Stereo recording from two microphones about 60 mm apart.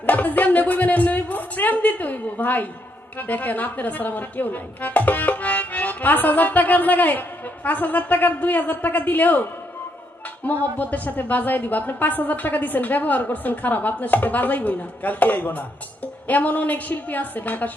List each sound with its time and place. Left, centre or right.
0.0 s a sound: left
3.2 s speech: left
10.8 s speech: left